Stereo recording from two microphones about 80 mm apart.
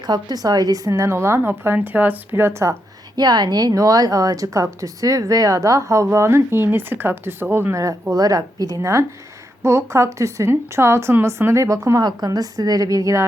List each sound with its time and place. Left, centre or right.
0.0 s speech: right
3.2 s a woman's voice: right
7.7 s a woman's voice: right
12.0 s a woman's voice: right